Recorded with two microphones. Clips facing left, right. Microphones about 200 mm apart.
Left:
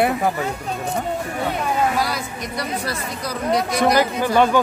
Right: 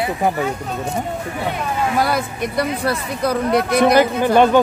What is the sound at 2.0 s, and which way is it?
Speech, 55° right (ahead or behind).